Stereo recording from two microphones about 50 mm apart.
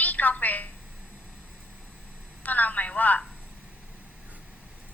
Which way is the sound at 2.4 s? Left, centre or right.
Left.